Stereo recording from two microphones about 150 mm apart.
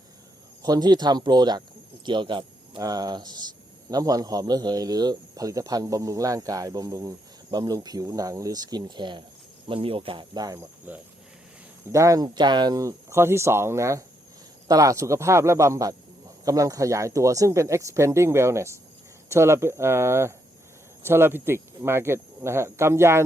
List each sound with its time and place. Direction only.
0.6 s speech: 25° right (ahead or behind)
10.9 s speech: 10° right (ahead or behind)
11.9 s speech: 20° right (ahead or behind)